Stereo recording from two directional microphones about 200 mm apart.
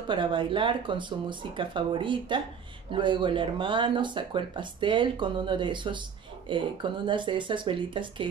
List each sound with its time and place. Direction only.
0.1 s speech: 25° right (ahead or behind)